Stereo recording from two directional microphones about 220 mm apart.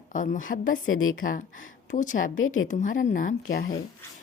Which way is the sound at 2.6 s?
35° left (ahead or behind).